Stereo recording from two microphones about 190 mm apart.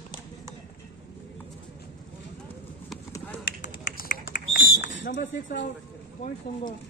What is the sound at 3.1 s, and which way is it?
Clip-clop, 10° left (ahead or behind).